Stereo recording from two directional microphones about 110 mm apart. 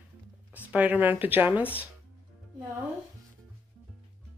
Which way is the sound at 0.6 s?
15° right (ahead or behind).